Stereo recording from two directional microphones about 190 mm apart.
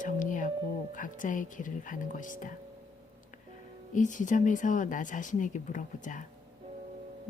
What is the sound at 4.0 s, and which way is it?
Speech, 40° left (ahead or behind).